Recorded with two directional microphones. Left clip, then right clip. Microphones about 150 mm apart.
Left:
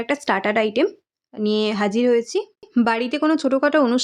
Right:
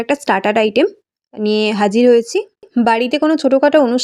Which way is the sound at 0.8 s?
20° right (ahead or behind).